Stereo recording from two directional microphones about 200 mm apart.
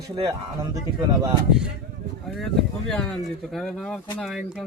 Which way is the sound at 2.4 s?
Centre (ahead or behind).